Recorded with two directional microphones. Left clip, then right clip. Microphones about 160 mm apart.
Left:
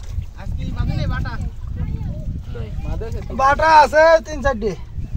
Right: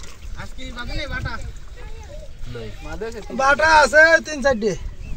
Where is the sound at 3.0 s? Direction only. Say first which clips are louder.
Left 2 dB; 55° left (ahead or behind).